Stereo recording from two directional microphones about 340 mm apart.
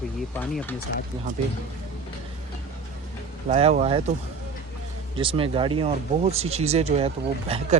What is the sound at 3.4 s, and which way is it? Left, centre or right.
Speech, centre.